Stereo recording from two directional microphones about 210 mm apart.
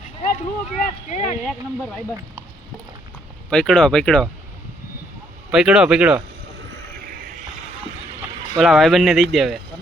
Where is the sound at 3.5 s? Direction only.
5° left (ahead or behind).